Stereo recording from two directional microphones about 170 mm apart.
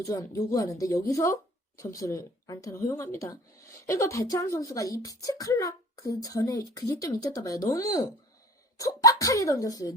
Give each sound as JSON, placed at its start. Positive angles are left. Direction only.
{"t": 0.0, "sound": "a woman's voice", "side_deg": 20}